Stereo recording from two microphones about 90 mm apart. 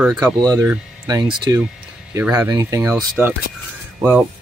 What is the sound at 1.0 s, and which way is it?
Speech, 45° right (ahead or behind).